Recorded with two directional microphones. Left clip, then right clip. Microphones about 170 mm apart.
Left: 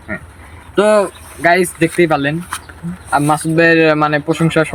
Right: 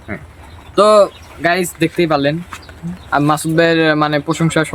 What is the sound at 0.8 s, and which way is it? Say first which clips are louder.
Speech: right 2 dB; 15° right (ahead or behind).